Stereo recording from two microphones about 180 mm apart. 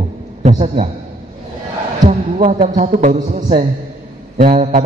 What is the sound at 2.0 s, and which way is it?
A man's voice, 35° right (ahead or behind).